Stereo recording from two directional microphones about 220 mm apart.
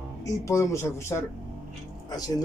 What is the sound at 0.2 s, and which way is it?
Speech, 15° left (ahead or behind).